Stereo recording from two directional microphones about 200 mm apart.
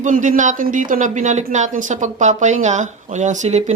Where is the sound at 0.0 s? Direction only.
40° right (ahead or behind).